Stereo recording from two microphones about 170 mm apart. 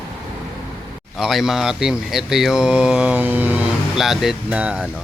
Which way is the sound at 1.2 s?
Centre (ahead or behind).